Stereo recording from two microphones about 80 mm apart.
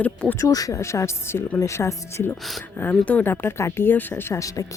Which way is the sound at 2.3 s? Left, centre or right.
Centre.